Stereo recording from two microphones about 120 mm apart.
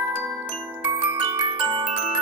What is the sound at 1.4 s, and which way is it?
Glockenspiel, 40° right (ahead or behind).